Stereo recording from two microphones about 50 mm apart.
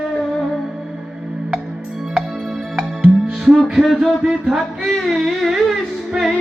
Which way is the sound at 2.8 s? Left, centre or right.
Centre.